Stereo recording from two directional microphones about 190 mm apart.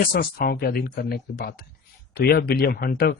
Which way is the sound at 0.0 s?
50° left (ahead or behind).